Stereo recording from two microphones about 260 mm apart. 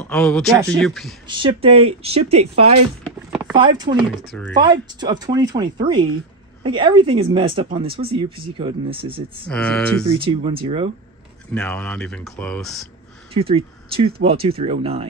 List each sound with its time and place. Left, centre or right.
0.0 s speech: centre
1.3 s speech: right
3.0 s a sound: centre
3.5 s speech: centre
4.3 s speech: centre
4.6 s speech: centre
9.5 s speech: centre
10.1 s speech: centre
11.5 s speech: centre
13.3 s speech: right